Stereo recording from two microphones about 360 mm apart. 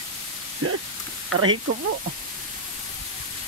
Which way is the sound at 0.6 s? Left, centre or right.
Right.